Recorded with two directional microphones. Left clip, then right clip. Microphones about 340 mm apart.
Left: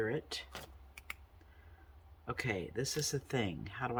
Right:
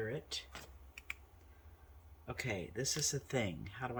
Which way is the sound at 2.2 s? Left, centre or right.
Centre.